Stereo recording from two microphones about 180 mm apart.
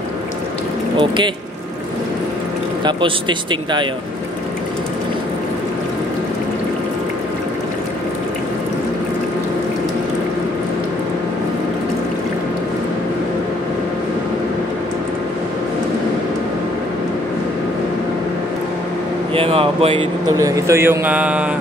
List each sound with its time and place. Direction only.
0.9 s speech: 25° right (ahead or behind)
2.8 s speech: 25° right (ahead or behind)
19.3 s a man's voice: 30° right (ahead or behind); by 21.5 s 10° right (ahead or behind)